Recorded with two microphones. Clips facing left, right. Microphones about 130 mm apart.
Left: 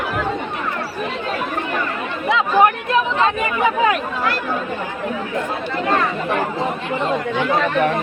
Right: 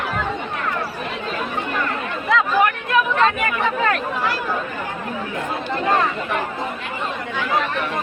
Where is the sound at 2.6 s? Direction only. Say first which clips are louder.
Left 3 dB; 30° left (ahead or behind).